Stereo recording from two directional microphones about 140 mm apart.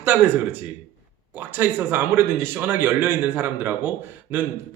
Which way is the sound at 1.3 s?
15° right (ahead or behind).